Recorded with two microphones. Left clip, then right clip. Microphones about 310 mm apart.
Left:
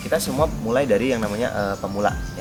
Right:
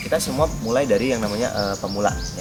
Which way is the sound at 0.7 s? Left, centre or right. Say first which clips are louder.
Even; centre.